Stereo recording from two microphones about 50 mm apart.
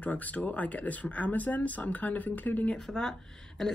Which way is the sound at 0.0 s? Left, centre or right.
Left.